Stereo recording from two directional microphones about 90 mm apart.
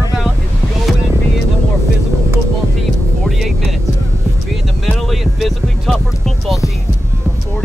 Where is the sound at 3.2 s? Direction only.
Centre (ahead or behind).